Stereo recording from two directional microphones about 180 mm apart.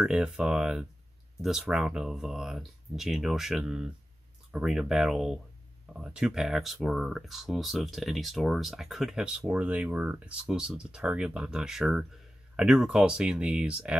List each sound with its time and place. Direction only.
0.0 s speech: 5° right (ahead or behind)